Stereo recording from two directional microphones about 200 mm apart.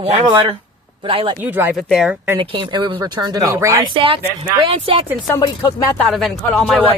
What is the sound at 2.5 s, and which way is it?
Speech, 25° right (ahead or behind).